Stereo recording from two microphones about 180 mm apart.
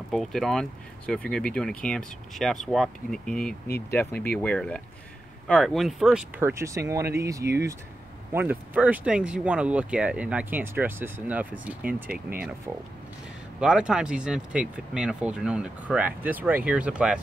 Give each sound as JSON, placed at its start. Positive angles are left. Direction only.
{"t": 0.1, "sound": "speech", "side_deg": 0}